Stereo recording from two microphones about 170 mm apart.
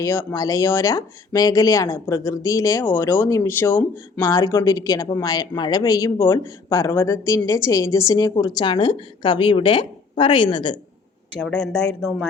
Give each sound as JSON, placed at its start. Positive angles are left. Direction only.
{"t": 0.0, "sound": "speech", "side_deg": 15}
{"t": 11.3, "sound": "speech", "side_deg": 5}